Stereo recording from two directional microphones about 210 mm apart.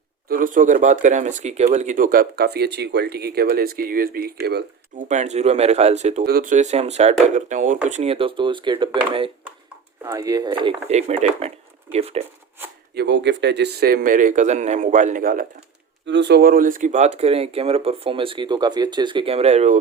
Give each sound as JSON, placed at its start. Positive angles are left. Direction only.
{"t": 0.3, "sound": "speech", "side_deg": -40}
{"t": 5.0, "sound": "speech", "side_deg": -35}
{"t": 6.2, "sound": "speech", "side_deg": -40}
{"t": 12.9, "sound": "speech", "side_deg": -55}
{"t": 16.0, "sound": "speech", "side_deg": -55}